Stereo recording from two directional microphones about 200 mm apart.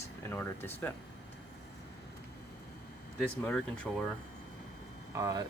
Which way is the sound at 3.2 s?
5° left (ahead or behind).